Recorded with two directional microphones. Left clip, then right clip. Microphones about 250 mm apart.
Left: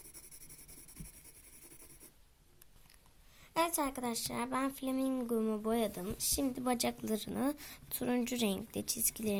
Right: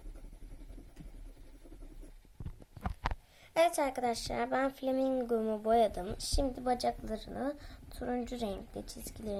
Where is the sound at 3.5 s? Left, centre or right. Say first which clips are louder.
Right 5 dB; centre.